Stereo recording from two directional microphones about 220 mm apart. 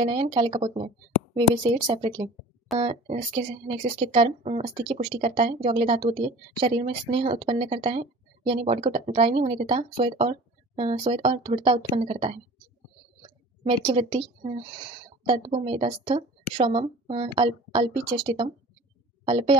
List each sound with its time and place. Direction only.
0.0 s speech: 20° right (ahead or behind)
3.6 s speech: 25° right (ahead or behind)
13.8 s a woman's voice: 25° right (ahead or behind)